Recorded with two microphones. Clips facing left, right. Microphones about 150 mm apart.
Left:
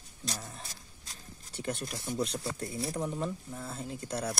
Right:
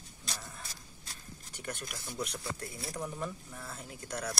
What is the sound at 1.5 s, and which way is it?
Speech, 25° left (ahead or behind).